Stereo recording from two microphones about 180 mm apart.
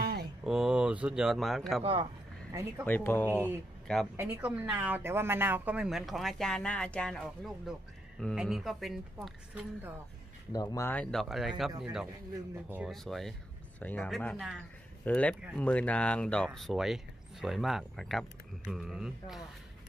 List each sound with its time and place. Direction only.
0.0 s a sound: 60° right (ahead or behind)
0.4 s speech: 5° right (ahead or behind)
2.8 s speech: 10° left (ahead or behind)
4.2 s speech: 10° right (ahead or behind)
10.5 s speech: 20° left (ahead or behind); by 12.9 s 10° right (ahead or behind)
12.9 s speech: centre (ahead or behind)
14.3 s speech: 5° right (ahead or behind)
15.0 s speech: 10° left (ahead or behind)